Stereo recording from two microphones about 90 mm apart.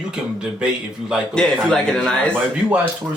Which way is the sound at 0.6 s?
10° right (ahead or behind).